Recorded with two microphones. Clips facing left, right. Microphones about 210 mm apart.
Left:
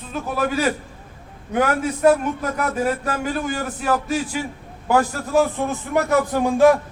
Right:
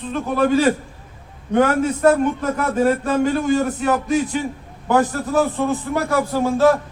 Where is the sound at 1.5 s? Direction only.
10° left (ahead or behind).